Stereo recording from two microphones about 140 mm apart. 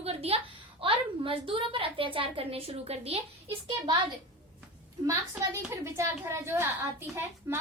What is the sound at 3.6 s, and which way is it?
Speech, 35° right (ahead or behind).